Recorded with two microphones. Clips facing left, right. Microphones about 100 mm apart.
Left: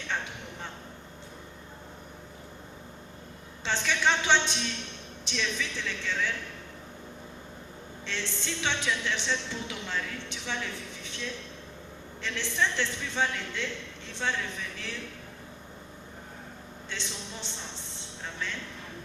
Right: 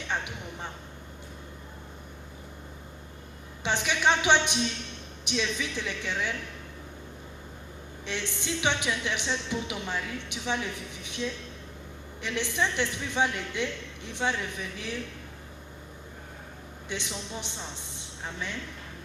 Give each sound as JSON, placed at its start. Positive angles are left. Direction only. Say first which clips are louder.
{"t": 0.1, "sound": "a sound", "louder": "right 1 dB", "side_deg": -15}
{"t": 3.6, "sound": "a woman's voice", "louder": "right 1 dB", "side_deg": -15}
{"t": 8.0, "sound": "a woman's voice", "louder": "right 2 dB", "side_deg": -15}
{"t": 16.9, "sound": "a woman's voice", "louder": "right 4 dB", "side_deg": -15}